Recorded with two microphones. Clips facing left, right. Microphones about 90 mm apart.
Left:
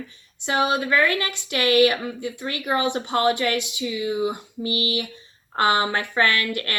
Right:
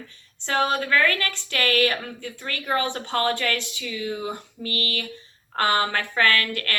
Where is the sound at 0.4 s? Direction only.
15° left (ahead or behind).